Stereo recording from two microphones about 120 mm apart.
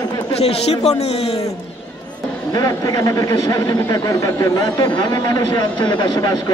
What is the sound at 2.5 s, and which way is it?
A man's voice, 30° left (ahead or behind).